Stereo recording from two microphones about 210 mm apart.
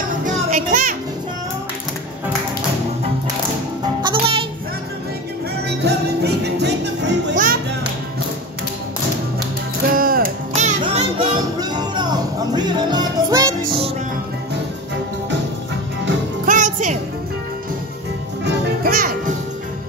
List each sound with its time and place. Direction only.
0.2 s music: 40° right (ahead or behind)
3.8 s music: 20° right (ahead or behind)
5.8 s music: 50° right (ahead or behind)
9.9 s music: 45° right (ahead or behind)
11.1 s music: 20° right (ahead or behind)
16.4 s music: 35° right (ahead or behind)
18.9 s music: 40° right (ahead or behind)